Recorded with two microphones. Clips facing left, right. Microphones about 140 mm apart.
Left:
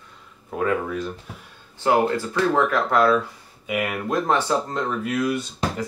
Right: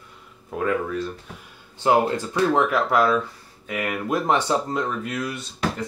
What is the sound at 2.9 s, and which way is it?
Speech, centre (ahead or behind).